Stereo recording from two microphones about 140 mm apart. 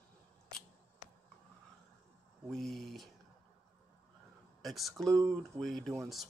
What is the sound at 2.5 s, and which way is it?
Speech, centre (ahead or behind).